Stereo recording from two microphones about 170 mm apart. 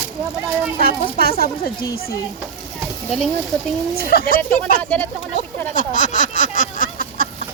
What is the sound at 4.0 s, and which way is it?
Speech, 60° left (ahead or behind).